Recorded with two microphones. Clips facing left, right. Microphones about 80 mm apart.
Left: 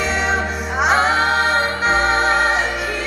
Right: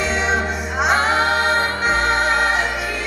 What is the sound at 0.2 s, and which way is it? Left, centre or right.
Music, left.